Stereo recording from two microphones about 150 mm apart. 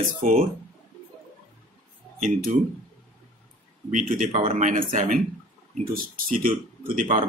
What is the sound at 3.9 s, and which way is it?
Speech, 65° right (ahead or behind).